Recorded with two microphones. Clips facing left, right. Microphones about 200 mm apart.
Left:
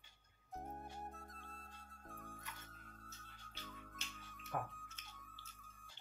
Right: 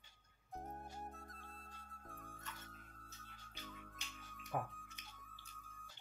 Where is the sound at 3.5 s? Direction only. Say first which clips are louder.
Even; 15° right (ahead or behind).